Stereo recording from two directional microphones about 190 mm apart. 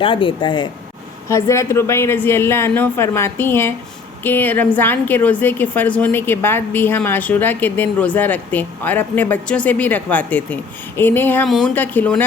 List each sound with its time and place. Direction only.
0.0 s a woman's voice: 25° left (ahead or behind); by 12.2 s 5° left (ahead or behind)